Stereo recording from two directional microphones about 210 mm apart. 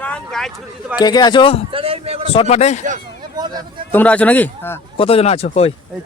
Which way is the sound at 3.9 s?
10° left (ahead or behind).